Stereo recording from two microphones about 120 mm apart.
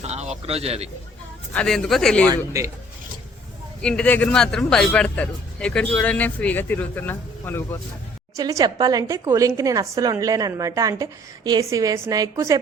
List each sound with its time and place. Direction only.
0.0 s speech: 65° right (ahead or behind)
1.5 s speech: 5° left (ahead or behind)
2.2 s a woman's voice: 30° right (ahead or behind)
3.8 s speech: 10° left (ahead or behind)
8.4 s a woman's voice: 30° right (ahead or behind)